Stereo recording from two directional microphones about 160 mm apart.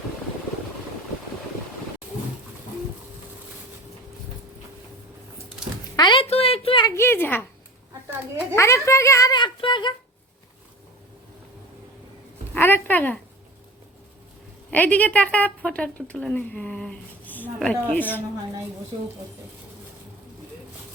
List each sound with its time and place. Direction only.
6.0 s a sound: 30° left (ahead or behind)
6.8 s speech: 15° left (ahead or behind)
8.5 s a child's voice: 15° left (ahead or behind)
12.5 s a woman's voice: 15° left (ahead or behind)
14.7 s speech: 10° left (ahead or behind)